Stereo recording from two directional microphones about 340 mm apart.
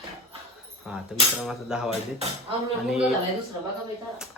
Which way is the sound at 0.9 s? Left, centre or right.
Centre.